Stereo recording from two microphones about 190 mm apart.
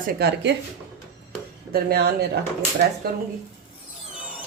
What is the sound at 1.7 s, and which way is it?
Speech, 55° right (ahead or behind).